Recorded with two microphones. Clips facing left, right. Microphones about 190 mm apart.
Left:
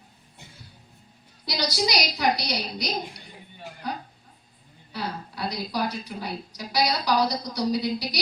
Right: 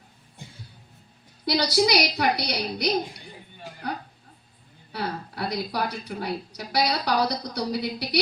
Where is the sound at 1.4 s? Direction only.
60° right (ahead or behind).